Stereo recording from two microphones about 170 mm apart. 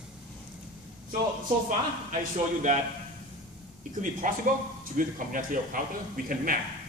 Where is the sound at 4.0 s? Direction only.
50° right (ahead or behind).